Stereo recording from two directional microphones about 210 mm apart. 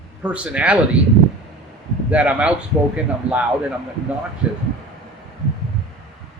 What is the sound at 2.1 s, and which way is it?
A man's voice, 5° right (ahead or behind).